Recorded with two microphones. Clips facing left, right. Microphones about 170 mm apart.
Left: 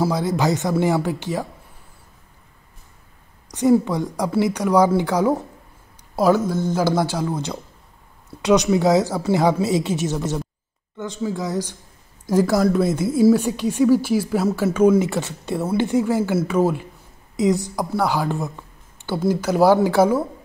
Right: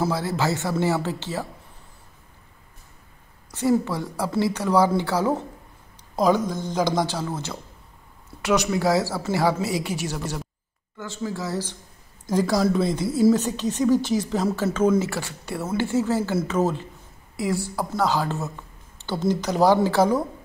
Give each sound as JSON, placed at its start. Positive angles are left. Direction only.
{"t": 0.0, "sound": "a woman's voice", "side_deg": 15}
{"t": 3.5, "sound": "a woman's voice", "side_deg": 15}